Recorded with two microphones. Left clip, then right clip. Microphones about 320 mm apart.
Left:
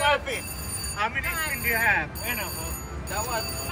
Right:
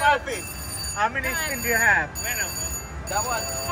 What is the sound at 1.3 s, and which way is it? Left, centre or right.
Speech, right.